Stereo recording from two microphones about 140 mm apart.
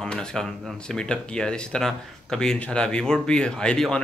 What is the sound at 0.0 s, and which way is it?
Speech, 5° left (ahead or behind).